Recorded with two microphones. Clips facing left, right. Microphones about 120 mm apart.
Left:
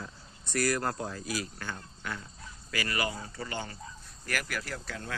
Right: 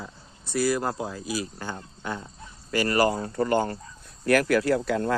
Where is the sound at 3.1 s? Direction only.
55° right (ahead or behind).